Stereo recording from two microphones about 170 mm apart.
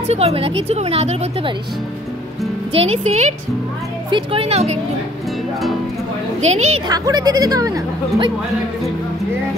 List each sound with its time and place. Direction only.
0.0 s speech: 40° right (ahead or behind)
2.7 s speech: 35° right (ahead or behind)
6.4 s speech: 40° right (ahead or behind)
6.9 s speech: 20° right (ahead or behind)